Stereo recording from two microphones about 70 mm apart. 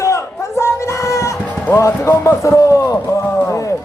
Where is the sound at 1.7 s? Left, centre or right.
Left.